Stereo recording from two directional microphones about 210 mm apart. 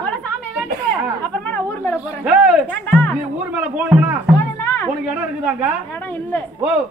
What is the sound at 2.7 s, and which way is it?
Speech, 5° left (ahead or behind).